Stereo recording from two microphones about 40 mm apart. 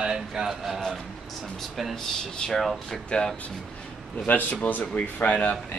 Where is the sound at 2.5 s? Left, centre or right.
Centre.